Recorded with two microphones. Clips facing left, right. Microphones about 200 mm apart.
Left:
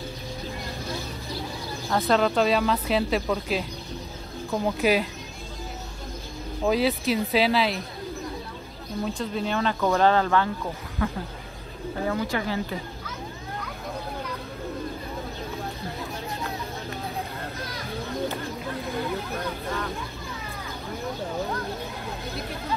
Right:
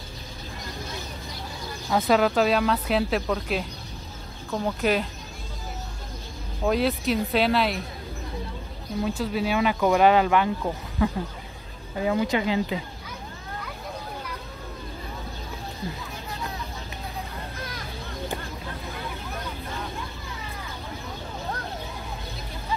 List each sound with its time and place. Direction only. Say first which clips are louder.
1.9 s speech: right 1 dB; 5° right (ahead or behind)
6.6 s speech: even; centre (ahead or behind)
9.0 s speech: right 2 dB; 5° right (ahead or behind)